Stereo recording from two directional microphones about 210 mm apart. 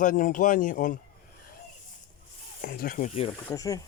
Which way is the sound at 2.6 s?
45° left (ahead or behind).